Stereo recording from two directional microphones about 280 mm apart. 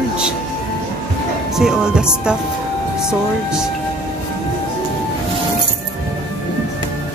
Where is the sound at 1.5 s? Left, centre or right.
Centre.